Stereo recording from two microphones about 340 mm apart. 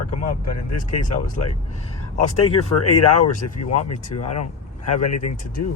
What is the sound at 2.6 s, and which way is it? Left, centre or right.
Speech, left.